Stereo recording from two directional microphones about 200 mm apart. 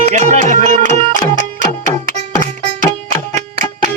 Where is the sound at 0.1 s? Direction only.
35° right (ahead or behind).